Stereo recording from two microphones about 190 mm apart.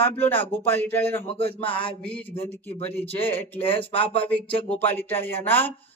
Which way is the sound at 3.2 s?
10° left (ahead or behind).